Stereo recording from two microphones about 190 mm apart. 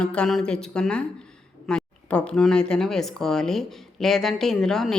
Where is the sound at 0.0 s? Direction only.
5° left (ahead or behind).